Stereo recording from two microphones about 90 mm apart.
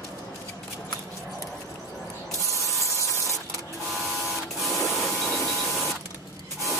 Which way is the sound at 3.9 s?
Centre (ahead or behind).